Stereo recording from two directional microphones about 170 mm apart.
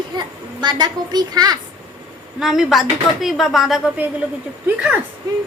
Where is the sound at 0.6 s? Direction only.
25° right (ahead or behind).